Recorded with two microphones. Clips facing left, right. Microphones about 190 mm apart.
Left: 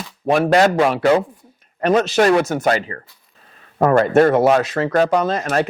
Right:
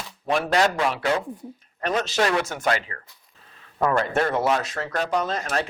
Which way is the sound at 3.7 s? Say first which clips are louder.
Left 9 dB; 55° left (ahead or behind).